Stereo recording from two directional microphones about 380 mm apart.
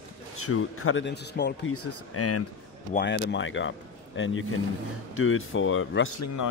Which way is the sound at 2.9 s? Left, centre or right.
Left.